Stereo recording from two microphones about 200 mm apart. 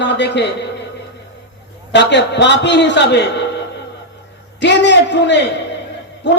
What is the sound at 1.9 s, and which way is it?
A man's voice, 60° left (ahead or behind).